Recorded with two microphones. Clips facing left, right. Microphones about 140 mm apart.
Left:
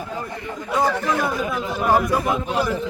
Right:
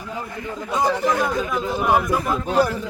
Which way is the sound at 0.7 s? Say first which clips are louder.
Even; 15° right (ahead or behind).